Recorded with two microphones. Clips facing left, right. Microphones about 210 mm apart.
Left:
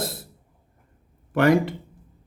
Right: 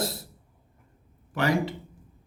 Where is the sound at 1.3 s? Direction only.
55° left (ahead or behind).